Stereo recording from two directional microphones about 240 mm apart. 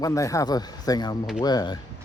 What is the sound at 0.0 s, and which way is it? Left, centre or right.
Speech, centre.